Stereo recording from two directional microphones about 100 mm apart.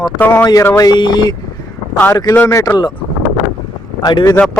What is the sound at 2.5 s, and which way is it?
Speech, 30° left (ahead or behind).